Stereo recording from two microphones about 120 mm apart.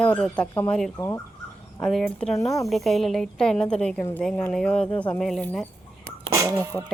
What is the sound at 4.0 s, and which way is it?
Speech, 20° left (ahead or behind).